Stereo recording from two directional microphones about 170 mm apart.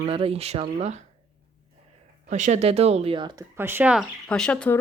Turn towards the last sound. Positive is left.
turn(degrees=5)  # may be behind; listen again after turning